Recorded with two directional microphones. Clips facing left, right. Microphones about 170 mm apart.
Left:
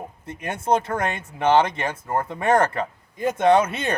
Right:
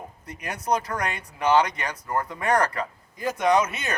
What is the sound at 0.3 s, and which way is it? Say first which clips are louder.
Speech: left 4 dB; 25° left (ahead or behind).